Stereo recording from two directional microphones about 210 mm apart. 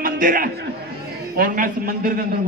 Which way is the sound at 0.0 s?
40° right (ahead or behind).